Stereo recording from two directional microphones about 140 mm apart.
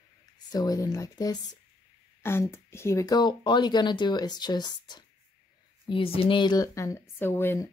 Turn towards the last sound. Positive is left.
turn(degrees=15)  # may be behind; listen again after turning